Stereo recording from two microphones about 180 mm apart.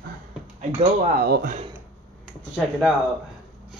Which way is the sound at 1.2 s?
55° right (ahead or behind).